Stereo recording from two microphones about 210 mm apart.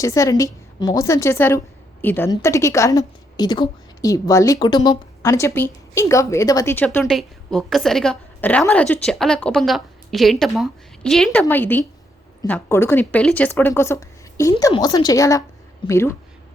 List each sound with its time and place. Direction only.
0.0 s a woman's voice: 15° left (ahead or behind)